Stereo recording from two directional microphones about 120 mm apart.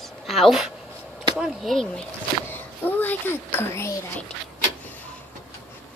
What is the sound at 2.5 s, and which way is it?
Speech, 15° left (ahead or behind).